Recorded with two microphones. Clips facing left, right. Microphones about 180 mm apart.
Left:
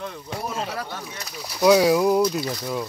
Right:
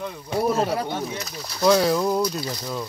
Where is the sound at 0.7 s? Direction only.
20° right (ahead or behind).